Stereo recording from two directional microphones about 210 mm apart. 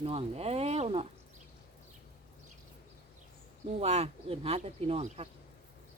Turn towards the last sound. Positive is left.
turn(degrees=-30)  # may be behind; listen again after turning